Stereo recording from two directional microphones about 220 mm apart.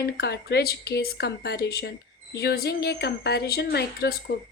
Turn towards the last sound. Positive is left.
turn(degrees=50)  # may be behind; listen again after turning